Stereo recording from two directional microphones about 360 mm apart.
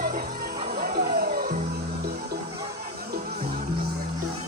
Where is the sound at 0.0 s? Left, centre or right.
Right.